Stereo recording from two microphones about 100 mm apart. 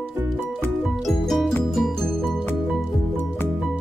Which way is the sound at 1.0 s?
Centre (ahead or behind).